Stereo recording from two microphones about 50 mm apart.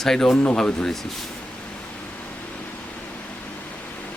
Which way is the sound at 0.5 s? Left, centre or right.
Centre.